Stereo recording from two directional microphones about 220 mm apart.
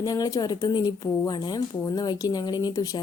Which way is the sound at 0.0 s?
15° left (ahead or behind).